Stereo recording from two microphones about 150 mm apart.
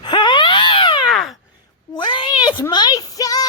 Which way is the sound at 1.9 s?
30° left (ahead or behind).